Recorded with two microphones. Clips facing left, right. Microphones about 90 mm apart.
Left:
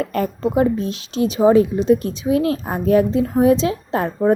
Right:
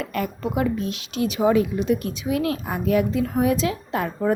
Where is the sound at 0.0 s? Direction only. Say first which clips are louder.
Left 6 dB; 35° left (ahead or behind).